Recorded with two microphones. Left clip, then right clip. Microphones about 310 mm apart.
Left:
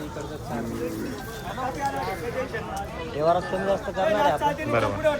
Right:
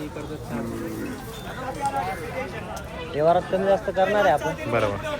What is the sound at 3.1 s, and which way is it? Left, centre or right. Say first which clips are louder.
Speech: right 3 dB; right.